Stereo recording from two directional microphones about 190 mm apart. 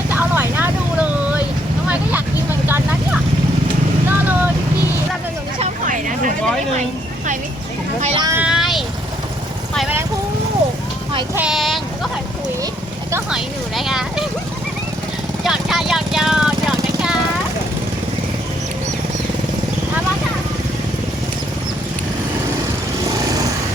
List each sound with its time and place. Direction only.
0.1 s vehicle: 10° right (ahead or behind)
5.5 s vehicle: 40° right (ahead or behind)
8.0 s speech: 30° right (ahead or behind)
8.3 s vehicle: 5° right (ahead or behind)
11.3 s speech: 5° right (ahead or behind)
13.3 s speech: centre (ahead or behind)
15.4 s vehicle: centre (ahead or behind)